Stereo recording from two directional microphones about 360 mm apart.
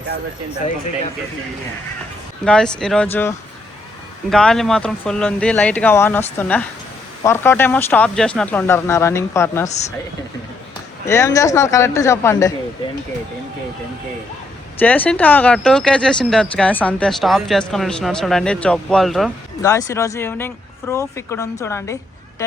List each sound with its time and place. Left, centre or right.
2.4 s speech: centre
9.6 s speech: centre
11.0 s speech: centre
14.8 s speech: centre